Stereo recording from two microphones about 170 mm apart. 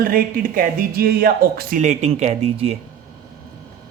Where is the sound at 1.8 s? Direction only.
40° right (ahead or behind).